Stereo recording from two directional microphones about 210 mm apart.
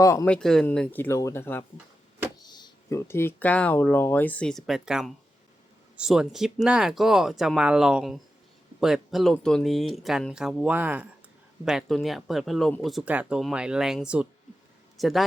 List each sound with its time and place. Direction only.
0.0 s speech: 15° left (ahead or behind)
0.3 s a man's voice: 5° left (ahead or behind)